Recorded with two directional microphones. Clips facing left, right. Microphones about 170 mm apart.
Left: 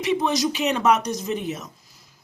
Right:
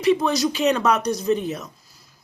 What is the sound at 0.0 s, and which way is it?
Speech, 15° left (ahead or behind).